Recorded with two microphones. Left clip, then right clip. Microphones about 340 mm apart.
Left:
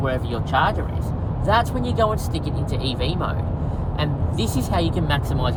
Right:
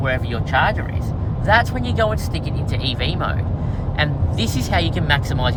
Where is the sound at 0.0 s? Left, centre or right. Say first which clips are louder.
Right 2 dB; right.